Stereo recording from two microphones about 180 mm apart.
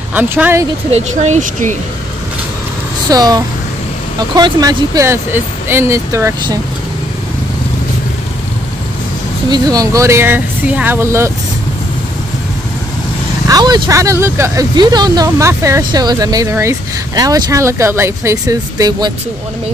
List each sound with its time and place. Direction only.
0.1 s speech: 10° right (ahead or behind)
0.9 s speech: 40° right (ahead or behind)
3.1 s speech: 20° right (ahead or behind)
9.5 s speech: 20° right (ahead or behind)
13.5 s speech: 20° right (ahead or behind)